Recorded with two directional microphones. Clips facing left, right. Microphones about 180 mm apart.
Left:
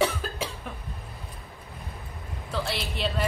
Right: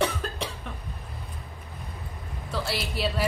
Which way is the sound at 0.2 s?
5° left (ahead or behind).